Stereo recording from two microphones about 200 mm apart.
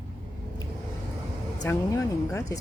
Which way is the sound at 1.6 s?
15° left (ahead or behind).